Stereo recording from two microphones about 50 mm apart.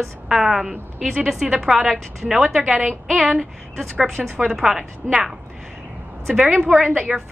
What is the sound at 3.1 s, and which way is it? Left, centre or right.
A woman's voice, centre.